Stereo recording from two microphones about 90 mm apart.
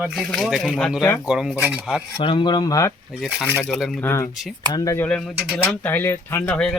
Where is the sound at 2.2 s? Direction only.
65° left (ahead or behind); by 3.0 s 40° left (ahead or behind).